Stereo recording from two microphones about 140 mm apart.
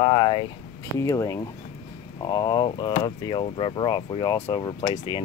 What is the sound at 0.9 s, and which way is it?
Speech, 25° left (ahead or behind).